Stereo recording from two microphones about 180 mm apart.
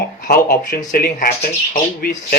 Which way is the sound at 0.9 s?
55° left (ahead or behind).